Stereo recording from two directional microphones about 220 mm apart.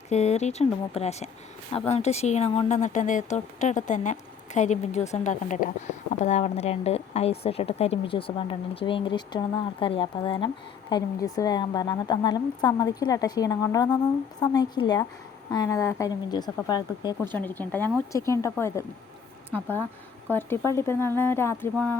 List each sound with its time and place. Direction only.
0.1 s speech: 30° left (ahead or behind)
17.3 s speech: 10° left (ahead or behind)